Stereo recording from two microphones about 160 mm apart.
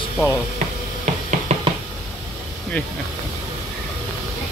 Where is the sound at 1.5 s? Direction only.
45° right (ahead or behind).